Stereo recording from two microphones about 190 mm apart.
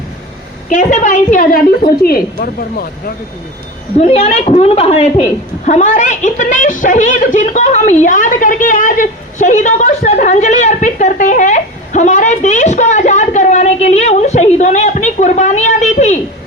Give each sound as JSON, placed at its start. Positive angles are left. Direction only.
{"t": 0.7, "sound": "a woman's voice", "side_deg": 40}
{"t": 4.0, "sound": "a woman's voice", "side_deg": 35}